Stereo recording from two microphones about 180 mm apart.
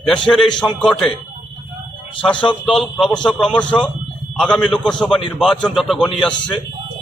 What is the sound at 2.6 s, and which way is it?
A man's voice, 5° left (ahead or behind).